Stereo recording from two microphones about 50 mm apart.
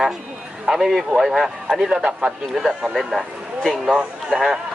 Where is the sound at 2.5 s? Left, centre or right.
Centre.